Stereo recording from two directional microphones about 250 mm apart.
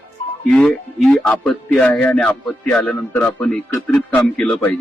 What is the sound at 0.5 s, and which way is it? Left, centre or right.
A man's voice, centre.